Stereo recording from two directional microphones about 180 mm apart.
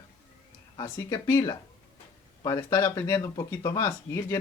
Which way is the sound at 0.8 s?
20° left (ahead or behind).